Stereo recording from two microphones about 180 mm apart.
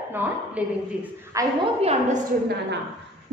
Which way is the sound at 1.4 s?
15° right (ahead or behind).